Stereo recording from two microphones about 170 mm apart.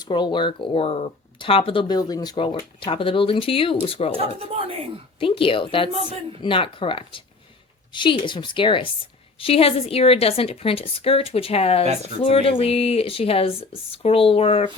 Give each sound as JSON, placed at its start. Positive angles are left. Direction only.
{"t": 0.0, "sound": "speech", "side_deg": 25}
{"t": 4.4, "sound": "speech", "side_deg": -35}
{"t": 5.2, "sound": "speech", "side_deg": 30}